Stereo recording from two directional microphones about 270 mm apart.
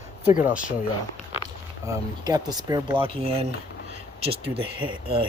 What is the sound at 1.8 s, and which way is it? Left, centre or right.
Speech, centre.